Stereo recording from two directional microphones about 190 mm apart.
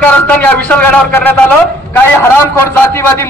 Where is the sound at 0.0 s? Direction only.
10° left (ahead or behind).